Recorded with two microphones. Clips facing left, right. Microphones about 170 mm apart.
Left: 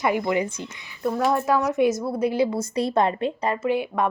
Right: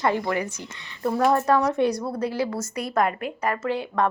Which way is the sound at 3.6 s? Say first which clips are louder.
Left 2 dB; 15° left (ahead or behind).